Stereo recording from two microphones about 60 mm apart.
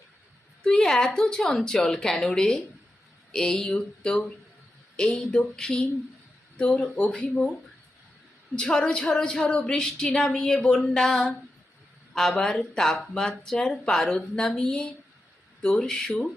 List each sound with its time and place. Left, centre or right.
0.6 s speech: centre
8.5 s speech: centre
10.8 s a sound: centre
12.3 s speech: centre